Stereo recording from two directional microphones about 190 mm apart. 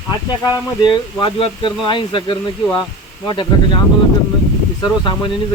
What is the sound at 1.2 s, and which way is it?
Speech, 25° left (ahead or behind).